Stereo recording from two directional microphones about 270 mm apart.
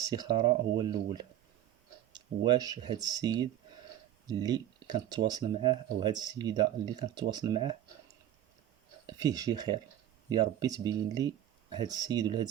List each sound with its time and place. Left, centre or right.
0.0 s speech: centre
9.0 s speech: centre